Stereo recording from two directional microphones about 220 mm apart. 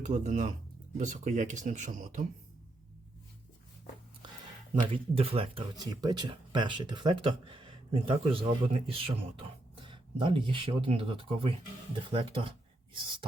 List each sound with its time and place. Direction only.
0.0 s speech: 30° right (ahead or behind)
4.7 s speech: 25° right (ahead or behind)